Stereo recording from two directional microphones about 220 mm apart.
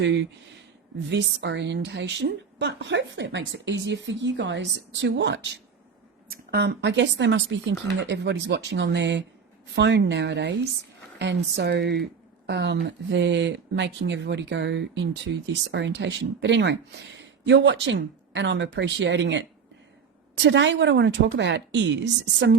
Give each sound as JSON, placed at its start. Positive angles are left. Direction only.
{"t": 0.0, "sound": "speech", "side_deg": -55}